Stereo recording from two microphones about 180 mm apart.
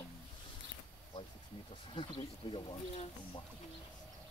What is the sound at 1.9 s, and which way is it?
Speech, 30° left (ahead or behind).